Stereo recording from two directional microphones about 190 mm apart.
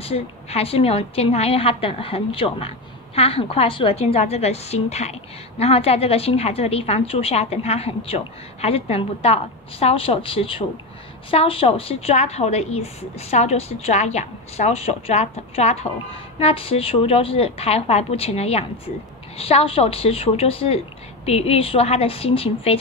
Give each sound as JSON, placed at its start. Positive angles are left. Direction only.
{"t": 0.0, "sound": "a woman's voice", "side_deg": 30}